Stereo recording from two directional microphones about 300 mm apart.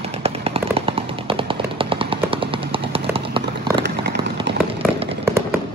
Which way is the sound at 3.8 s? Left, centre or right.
Right.